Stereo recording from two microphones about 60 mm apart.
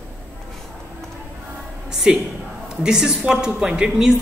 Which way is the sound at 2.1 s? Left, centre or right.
Centre.